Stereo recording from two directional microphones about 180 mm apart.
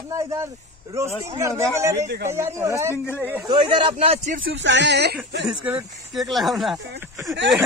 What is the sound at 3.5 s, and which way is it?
Speech, 30° right (ahead or behind).